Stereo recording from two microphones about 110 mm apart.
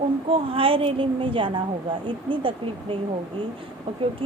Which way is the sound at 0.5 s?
55° right (ahead or behind).